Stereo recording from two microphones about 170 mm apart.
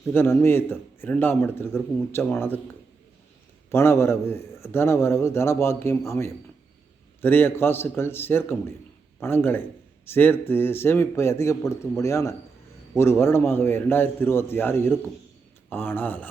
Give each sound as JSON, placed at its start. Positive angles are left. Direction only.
{"t": 0.1, "sound": "a man's voice", "side_deg": 15}
{"t": 3.7, "sound": "a man's voice", "side_deg": 15}